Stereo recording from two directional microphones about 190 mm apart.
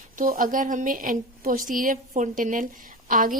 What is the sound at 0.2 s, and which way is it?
A woman's voice, 45° right (ahead or behind).